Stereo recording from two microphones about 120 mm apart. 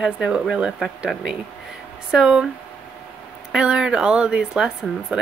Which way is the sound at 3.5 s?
5° right (ahead or behind).